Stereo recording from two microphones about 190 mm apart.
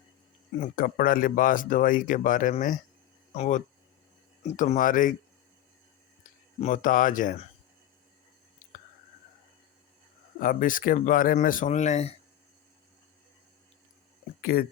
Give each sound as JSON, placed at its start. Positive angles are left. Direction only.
{"t": 0.6, "sound": "speech", "side_deg": 50}
{"t": 6.6, "sound": "speech", "side_deg": 45}
{"t": 10.4, "sound": "speech", "side_deg": 45}
{"t": 14.4, "sound": "speech", "side_deg": 50}